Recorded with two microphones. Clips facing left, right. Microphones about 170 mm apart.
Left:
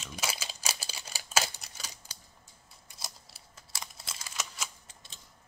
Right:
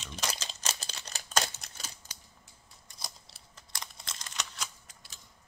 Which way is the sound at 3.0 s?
5° left (ahead or behind).